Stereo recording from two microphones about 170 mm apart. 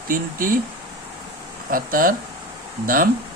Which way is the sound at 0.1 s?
55° right (ahead or behind).